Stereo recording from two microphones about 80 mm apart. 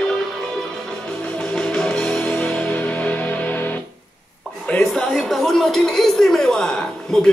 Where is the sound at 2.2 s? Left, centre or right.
Left.